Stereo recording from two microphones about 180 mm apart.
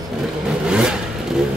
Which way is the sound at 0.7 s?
5° right (ahead or behind).